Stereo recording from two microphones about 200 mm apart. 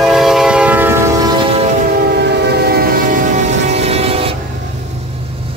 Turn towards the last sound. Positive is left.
turn(degrees=-30)  # may be behind; listen again after turning